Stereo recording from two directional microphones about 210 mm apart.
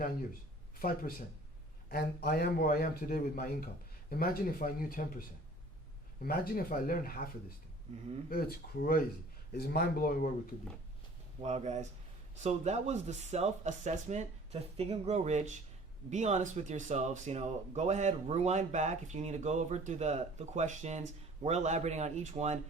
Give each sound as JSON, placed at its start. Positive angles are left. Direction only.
{"t": 0.8, "sound": "speech", "side_deg": 45}
{"t": 6.6, "sound": "speech", "side_deg": 40}
{"t": 8.3, "sound": "speech", "side_deg": 45}
{"t": 11.4, "sound": "speech", "side_deg": -35}